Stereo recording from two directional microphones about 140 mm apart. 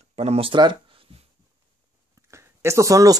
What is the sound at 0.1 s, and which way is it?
Speech, 45° right (ahead or behind).